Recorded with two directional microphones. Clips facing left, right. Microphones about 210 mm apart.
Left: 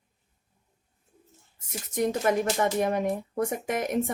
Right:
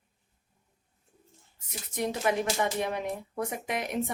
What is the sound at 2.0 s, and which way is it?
A woman's voice, 45° left (ahead or behind).